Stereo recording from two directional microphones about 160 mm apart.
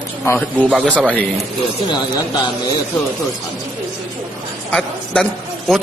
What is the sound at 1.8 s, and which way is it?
Speech, 25° left (ahead or behind).